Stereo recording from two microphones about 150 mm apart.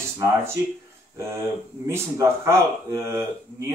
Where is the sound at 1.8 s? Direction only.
20° right (ahead or behind).